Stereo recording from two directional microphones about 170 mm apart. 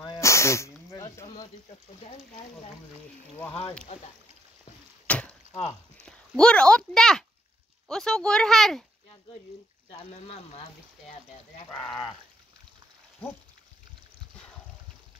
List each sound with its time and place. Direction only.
0.0 s a sound: 15° left (ahead or behind)
5.0 s chop: 10° left (ahead or behind)
6.0 s speech: 5° left (ahead or behind)
9.8 s speech: 35° left (ahead or behind)